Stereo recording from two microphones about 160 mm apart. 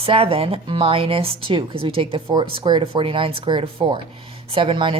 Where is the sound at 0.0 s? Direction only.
35° right (ahead or behind).